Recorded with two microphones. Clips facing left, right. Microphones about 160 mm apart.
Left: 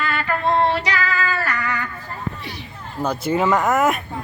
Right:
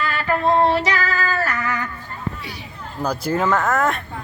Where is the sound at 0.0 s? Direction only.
40° right (ahead or behind).